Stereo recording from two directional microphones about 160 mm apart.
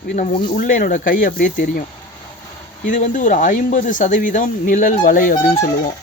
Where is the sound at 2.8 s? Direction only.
55° left (ahead or behind).